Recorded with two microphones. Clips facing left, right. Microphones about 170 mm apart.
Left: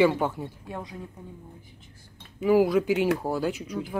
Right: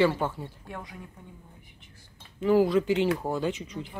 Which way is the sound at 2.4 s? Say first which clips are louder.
Left 1 dB; 10° left (ahead or behind).